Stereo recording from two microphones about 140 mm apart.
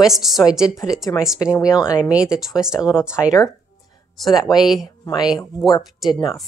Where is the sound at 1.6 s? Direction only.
5° right (ahead or behind).